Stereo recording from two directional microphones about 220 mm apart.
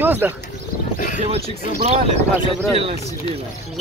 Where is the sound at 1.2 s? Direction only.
30° right (ahead or behind).